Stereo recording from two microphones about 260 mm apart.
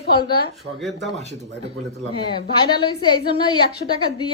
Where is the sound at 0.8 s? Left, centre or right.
Centre.